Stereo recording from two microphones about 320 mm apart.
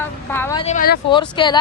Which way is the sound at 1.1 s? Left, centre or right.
Centre.